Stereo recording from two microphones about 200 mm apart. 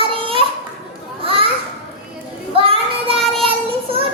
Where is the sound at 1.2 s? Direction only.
25° right (ahead or behind).